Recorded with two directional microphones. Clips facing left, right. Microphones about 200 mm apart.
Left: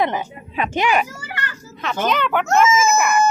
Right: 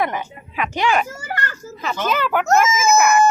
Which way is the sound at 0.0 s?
25° left (ahead or behind).